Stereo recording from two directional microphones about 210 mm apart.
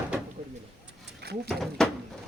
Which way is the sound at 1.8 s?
5° left (ahead or behind).